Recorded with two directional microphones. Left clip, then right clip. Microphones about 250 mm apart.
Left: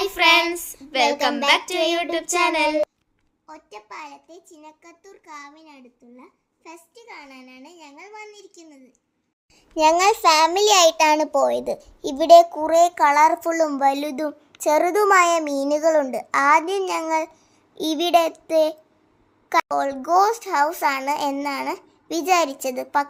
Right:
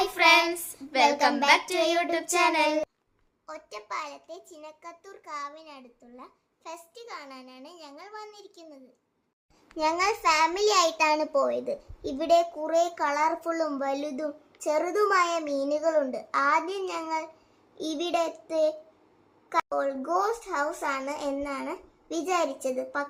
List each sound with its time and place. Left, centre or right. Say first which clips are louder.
0.0 s child singing: left 4 dB; centre
2.3 s a child's voice: left 4 dB; centre
9.7 s a child's voice: left 10 dB; left